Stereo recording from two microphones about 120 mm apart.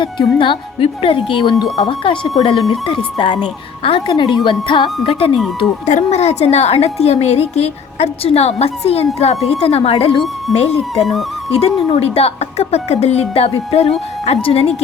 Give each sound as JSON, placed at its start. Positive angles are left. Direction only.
{"t": 0.0, "sound": "a woman's voice", "side_deg": 40}
{"t": 5.8, "sound": "a woman's voice", "side_deg": 75}
{"t": 11.0, "sound": "speech", "side_deg": 0}
{"t": 11.5, "sound": "a woman's voice", "side_deg": 55}